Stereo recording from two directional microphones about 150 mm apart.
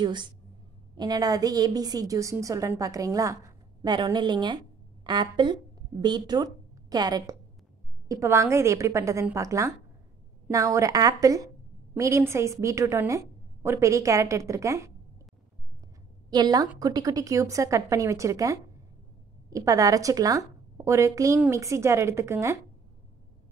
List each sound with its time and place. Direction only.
0.0 s a woman's voice: 30° right (ahead or behind)
16.3 s a woman's voice: 25° right (ahead or behind)